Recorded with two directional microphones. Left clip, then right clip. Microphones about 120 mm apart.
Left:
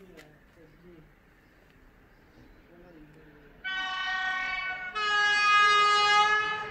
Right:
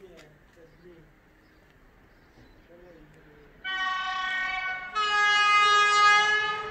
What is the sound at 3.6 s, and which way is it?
Vehicle, 20° left (ahead or behind).